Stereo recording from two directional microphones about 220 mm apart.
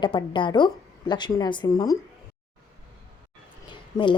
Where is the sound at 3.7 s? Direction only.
20° left (ahead or behind).